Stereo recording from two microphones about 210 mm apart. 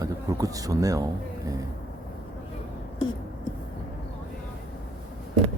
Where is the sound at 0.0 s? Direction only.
15° right (ahead or behind).